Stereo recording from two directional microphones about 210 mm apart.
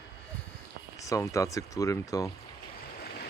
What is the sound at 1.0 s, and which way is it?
Speech, 15° left (ahead or behind).